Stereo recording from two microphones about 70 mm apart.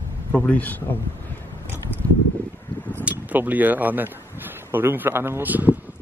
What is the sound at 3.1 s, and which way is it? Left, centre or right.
Speech, right.